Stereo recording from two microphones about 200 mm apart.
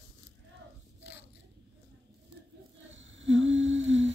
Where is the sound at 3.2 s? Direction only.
70° right (ahead or behind).